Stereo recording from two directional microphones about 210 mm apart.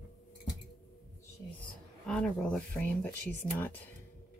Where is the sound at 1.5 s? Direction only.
5° left (ahead or behind).